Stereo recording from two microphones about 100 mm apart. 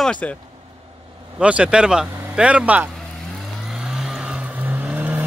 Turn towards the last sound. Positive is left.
turn(degrees=-15)  # may be behind; listen again after turning